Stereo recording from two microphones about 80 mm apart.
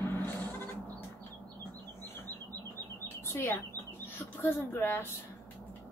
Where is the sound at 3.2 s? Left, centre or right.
Left.